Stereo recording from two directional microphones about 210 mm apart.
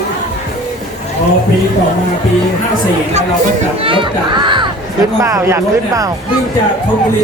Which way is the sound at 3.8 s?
25° right (ahead or behind).